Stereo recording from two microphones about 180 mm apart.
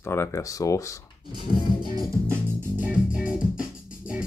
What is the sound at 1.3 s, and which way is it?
Music, 25° right (ahead or behind).